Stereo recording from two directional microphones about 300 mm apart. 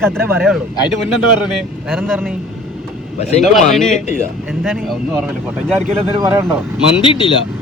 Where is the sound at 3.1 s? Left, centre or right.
Left.